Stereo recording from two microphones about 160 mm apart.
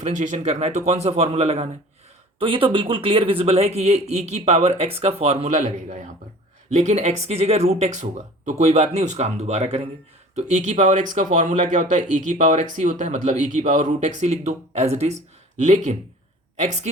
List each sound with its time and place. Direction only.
0.0 s speech: 50° right (ahead or behind)